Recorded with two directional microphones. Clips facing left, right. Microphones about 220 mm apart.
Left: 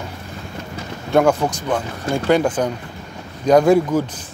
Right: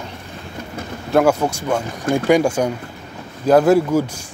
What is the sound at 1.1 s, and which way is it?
Speech, 5° right (ahead or behind).